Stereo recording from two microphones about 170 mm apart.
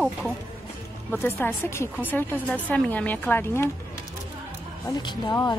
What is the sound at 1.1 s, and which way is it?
Speech, 15° left (ahead or behind).